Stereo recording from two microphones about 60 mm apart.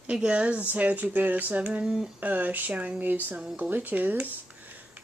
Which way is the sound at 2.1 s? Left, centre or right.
Right.